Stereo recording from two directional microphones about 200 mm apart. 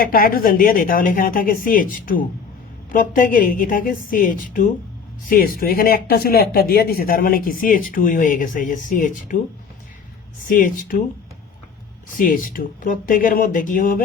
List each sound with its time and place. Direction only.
0.0 s a woman's voice: 45° left (ahead or behind)
10.4 s speech: 40° left (ahead or behind)
12.1 s speech: 45° left (ahead or behind)